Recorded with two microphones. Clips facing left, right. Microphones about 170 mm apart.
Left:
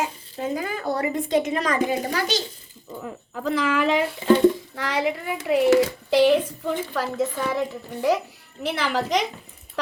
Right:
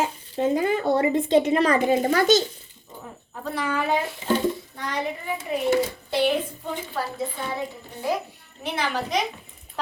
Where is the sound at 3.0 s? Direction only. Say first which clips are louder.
Left 5 dB; 90° left.